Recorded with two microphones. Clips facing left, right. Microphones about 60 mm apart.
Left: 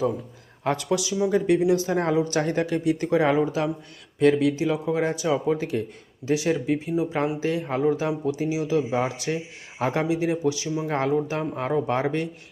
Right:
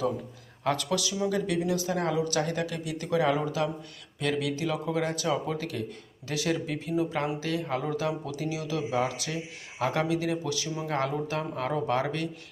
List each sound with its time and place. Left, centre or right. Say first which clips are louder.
0.6 s speech: left 4 dB; left